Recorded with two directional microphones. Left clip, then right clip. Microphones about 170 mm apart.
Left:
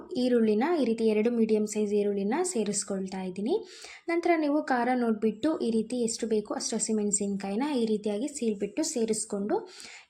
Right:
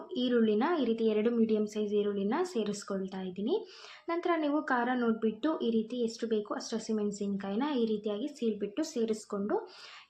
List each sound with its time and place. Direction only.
0.1 s a woman's voice: 15° left (ahead or behind)